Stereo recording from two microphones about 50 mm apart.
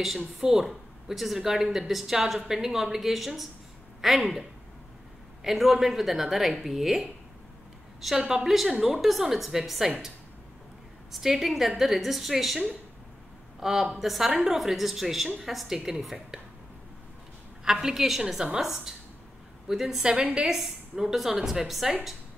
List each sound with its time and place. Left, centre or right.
0.4 s a woman's voice: centre
5.4 s a woman's voice: centre
8.2 s a woman's voice: centre
8.5 s a woman's voice: centre
11.1 s a woman's voice: centre
17.6 s a woman's voice: centre
20.1 s a woman's voice: right
20.4 s a woman's voice: centre